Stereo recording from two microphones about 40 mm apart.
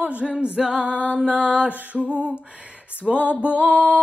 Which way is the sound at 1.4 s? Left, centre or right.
Right.